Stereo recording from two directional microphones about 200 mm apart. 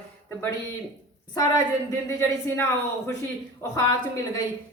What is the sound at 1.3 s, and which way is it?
A woman's voice, 15° left (ahead or behind).